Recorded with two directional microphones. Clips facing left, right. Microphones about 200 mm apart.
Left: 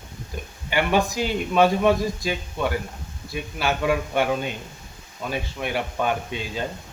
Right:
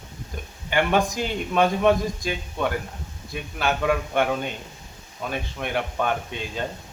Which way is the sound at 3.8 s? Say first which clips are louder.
Even; 5° left (ahead or behind).